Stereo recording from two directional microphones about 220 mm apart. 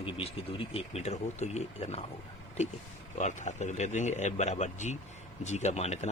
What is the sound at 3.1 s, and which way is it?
Speech, 35° left (ahead or behind).